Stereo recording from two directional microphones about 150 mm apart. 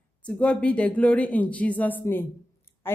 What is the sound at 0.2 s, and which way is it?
A woman's voice, 10° left (ahead or behind).